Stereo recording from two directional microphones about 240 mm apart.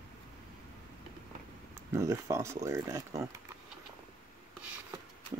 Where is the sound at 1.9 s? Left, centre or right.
Centre.